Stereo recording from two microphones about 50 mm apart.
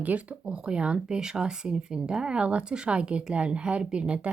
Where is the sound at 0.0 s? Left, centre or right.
Right.